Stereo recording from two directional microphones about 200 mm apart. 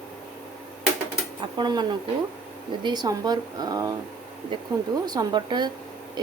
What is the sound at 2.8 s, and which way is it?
A woman's voice, 20° right (ahead or behind).